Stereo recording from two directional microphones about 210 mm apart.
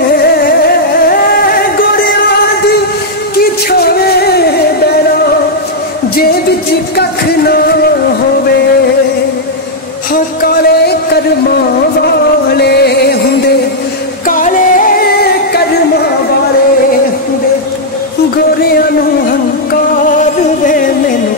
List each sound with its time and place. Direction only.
0.2 s music: 45° left (ahead or behind)
1.0 s a sound: 45° left (ahead or behind)
3.7 s a sound: 50° left (ahead or behind)
7.0 s music: 50° left (ahead or behind)
10.1 s music: 45° left (ahead or behind)
12.5 s music: 50° left (ahead or behind)
14.2 s music: 40° left (ahead or behind)
20.1 s music: 40° left (ahead or behind)